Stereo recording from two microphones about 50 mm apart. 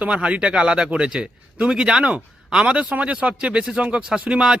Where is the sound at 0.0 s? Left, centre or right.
Right.